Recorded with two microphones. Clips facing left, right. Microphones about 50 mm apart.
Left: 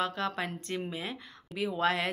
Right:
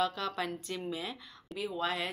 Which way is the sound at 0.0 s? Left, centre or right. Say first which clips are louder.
Left 1 dB; left.